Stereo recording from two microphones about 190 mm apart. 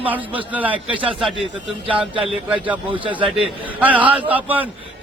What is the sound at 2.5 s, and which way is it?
A man's voice, 5° right (ahead or behind).